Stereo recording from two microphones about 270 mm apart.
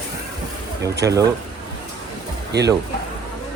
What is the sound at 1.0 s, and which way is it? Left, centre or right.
Speech, centre.